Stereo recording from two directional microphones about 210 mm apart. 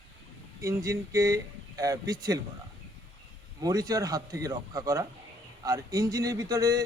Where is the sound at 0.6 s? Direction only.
15° right (ahead or behind).